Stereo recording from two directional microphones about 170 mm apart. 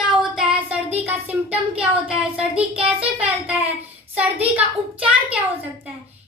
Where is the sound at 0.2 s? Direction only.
5° right (ahead or behind).